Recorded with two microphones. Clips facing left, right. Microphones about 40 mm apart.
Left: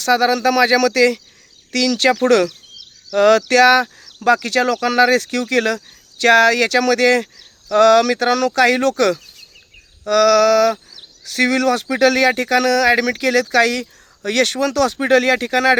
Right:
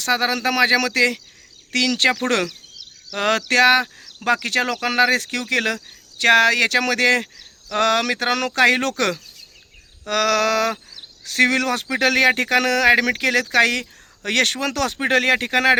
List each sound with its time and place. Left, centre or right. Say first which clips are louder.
0.0 s speech: left 5 dB; right